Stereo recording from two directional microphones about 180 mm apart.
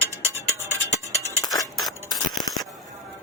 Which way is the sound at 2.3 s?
Centre (ahead or behind).